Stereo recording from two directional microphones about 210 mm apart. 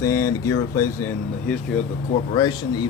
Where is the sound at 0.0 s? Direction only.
15° left (ahead or behind).